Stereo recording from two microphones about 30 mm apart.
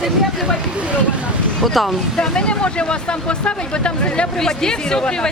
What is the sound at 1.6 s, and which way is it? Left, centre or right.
Speech, centre.